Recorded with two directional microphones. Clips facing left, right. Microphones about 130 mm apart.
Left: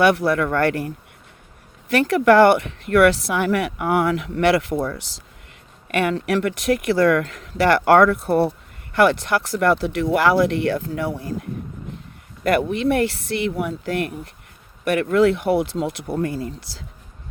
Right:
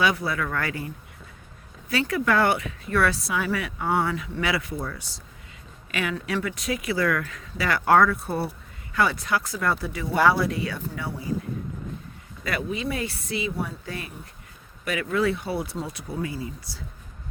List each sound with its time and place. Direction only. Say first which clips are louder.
0.0 s speech: left 8 dB; 70° left (ahead or behind); by 4.3 s 90° left
4.4 s speech: left 11 dB; 70° left (ahead or behind)
5.9 s speech: left 8 dB; 60° left (ahead or behind); by 11.3 s 85° left
12.4 s speech: left 10 dB; 70° left (ahead or behind)
14.8 s speech: left 8 dB; 70° left (ahead or behind)